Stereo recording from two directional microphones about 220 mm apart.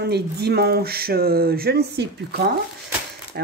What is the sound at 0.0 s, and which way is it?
Speech, 45° right (ahead or behind).